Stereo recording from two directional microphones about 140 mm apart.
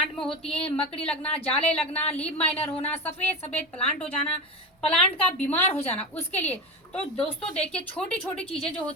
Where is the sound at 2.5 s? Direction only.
45° left (ahead or behind).